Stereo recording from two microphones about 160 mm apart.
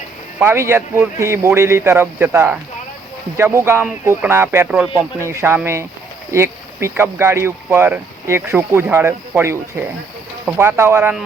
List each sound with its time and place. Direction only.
0.3 s speech: 15° right (ahead or behind)
10.6 s speech: 15° right (ahead or behind)